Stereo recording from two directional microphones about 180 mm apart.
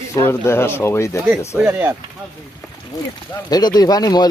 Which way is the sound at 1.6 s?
10° right (ahead or behind).